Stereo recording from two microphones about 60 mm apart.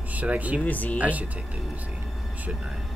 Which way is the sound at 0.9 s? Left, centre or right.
Right.